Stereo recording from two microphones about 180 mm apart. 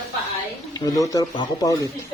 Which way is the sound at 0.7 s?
20° left (ahead or behind).